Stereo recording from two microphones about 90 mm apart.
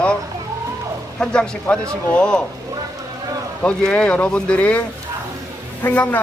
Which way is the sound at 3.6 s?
10° left (ahead or behind).